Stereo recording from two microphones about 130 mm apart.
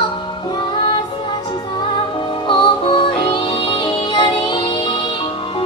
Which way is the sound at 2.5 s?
40° left (ahead or behind).